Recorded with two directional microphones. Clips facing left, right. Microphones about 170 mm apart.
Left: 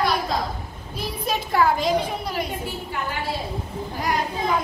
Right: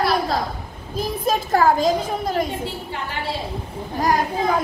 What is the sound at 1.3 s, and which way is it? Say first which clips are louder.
A child's voice: right 3 dB; 45° right (ahead or behind).